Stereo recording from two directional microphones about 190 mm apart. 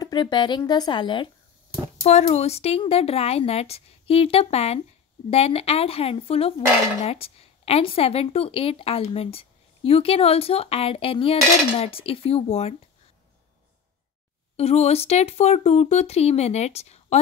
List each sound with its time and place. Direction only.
0.0 s speech: 25° left (ahead or behind)
2.0 s speech: 35° left (ahead or behind)
14.6 s speech: 35° left (ahead or behind)